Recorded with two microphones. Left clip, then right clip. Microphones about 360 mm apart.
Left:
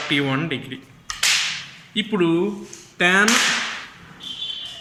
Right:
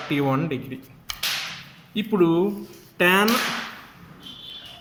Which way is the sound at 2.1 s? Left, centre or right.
Centre.